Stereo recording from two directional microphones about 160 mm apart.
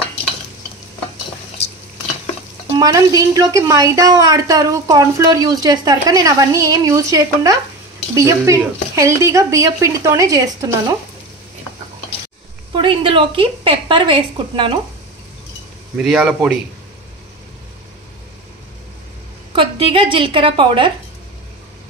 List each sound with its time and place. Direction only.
2.8 s a woman's voice: 20° right (ahead or behind)
12.7 s a woman's voice: 30° right (ahead or behind)
16.0 s a man's voice: centre (ahead or behind)
19.5 s a woman's voice: 35° right (ahead or behind)